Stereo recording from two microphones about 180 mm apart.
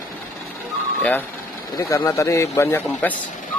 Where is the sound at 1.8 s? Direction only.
15° left (ahead or behind).